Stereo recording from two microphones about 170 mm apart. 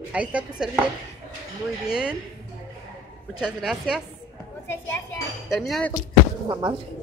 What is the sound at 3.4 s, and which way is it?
Speech, 5° right (ahead or behind).